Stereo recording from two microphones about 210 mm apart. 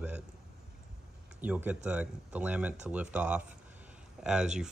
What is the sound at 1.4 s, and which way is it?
Speech, 10° right (ahead or behind).